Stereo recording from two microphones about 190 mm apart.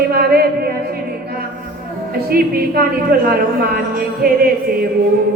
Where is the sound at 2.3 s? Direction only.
50° right (ahead or behind).